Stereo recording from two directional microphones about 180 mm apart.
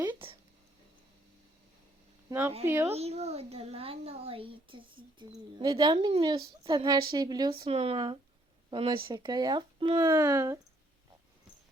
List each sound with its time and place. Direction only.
2.3 s speech: 20° right (ahead or behind)
2.9 s a child's voice: 35° right (ahead or behind); by 10.6 s 20° right (ahead or behind)